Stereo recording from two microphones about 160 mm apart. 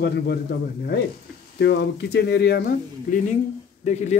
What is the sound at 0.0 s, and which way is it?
Speech, 90° left.